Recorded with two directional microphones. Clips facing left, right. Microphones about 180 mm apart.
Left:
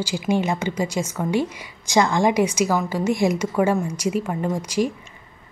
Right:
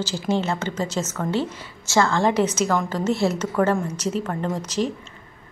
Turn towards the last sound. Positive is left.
turn(degrees=10)  # may be behind; listen again after turning